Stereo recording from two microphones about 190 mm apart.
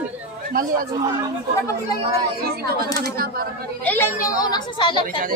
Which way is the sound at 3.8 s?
10° left (ahead or behind).